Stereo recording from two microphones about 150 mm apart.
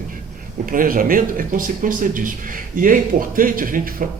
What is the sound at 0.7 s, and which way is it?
Speech, 65° right (ahead or behind).